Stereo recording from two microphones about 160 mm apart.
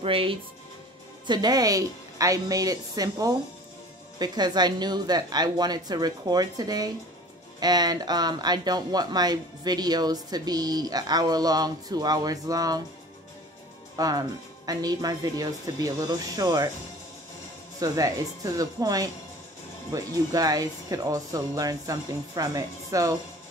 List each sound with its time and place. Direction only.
0.0 s speech: 35° right (ahead or behind)
13.9 s speech: 20° right (ahead or behind)
17.7 s speech: 20° right (ahead or behind)